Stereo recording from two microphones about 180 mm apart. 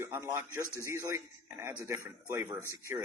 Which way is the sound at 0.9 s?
15° right (ahead or behind).